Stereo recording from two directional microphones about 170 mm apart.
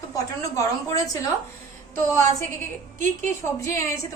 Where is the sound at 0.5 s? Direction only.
20° left (ahead or behind).